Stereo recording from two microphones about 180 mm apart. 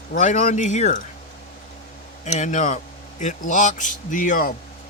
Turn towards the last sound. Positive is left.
turn(degrees=50)  # may be behind; listen again after turning